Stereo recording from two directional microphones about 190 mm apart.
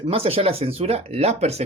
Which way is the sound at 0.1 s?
30° right (ahead or behind).